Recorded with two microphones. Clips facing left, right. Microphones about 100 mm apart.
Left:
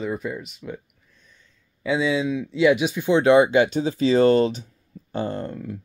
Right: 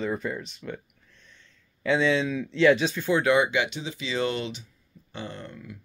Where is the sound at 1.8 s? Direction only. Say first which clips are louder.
Left 1 dB; 5° left (ahead or behind).